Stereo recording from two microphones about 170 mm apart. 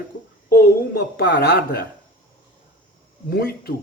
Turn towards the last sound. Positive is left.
turn(degrees=60)  # may be behind; listen again after turning